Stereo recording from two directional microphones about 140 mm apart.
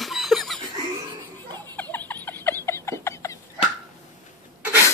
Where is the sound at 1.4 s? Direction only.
30° right (ahead or behind).